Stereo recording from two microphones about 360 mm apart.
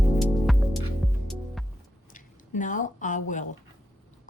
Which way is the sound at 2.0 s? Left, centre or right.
Left.